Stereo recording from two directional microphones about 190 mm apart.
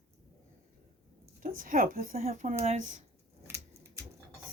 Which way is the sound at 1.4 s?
45° right (ahead or behind).